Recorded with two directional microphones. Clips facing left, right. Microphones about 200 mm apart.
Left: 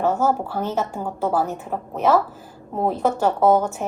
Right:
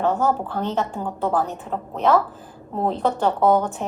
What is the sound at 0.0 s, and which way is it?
A woman's voice, 10° left (ahead or behind).